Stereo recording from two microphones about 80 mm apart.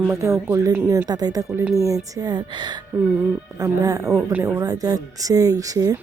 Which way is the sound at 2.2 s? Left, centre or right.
Right.